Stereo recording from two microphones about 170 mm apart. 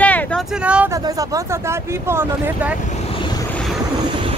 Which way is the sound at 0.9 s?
20° right (ahead or behind).